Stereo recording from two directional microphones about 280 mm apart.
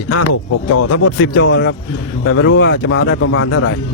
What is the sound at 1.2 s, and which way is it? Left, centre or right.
Speech, left.